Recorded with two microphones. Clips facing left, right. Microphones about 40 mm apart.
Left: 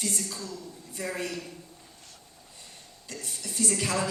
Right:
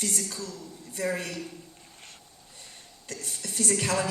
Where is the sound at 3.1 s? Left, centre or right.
Right.